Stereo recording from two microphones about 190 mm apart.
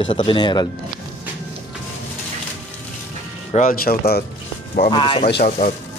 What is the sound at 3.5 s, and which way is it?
Speech, 50° left (ahead or behind).